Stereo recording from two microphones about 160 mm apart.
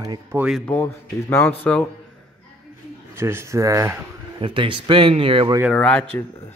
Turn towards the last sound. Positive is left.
turn(degrees=5)  # may be behind; listen again after turning